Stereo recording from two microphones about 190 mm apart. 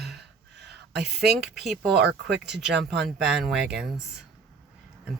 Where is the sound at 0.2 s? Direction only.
60° right (ahead or behind).